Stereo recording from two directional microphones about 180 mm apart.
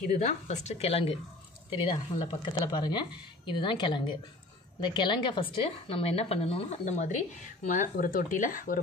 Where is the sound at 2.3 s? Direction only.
25° left (ahead or behind).